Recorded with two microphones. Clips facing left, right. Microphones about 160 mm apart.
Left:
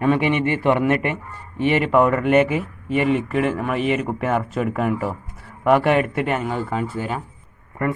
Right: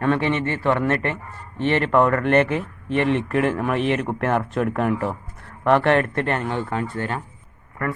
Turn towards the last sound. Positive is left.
turn(degrees=20)  # may be behind; listen again after turning